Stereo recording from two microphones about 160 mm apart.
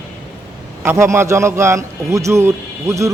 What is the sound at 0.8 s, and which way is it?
A man's voice, 15° right (ahead or behind).